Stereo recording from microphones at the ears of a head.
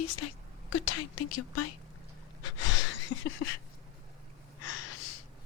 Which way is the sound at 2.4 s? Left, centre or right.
Left.